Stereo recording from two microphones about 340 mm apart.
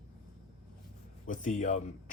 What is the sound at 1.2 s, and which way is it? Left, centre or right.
Speech, left.